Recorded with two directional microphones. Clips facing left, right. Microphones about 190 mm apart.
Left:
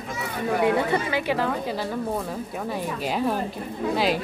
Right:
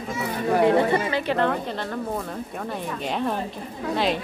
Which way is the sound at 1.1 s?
5° left (ahead or behind).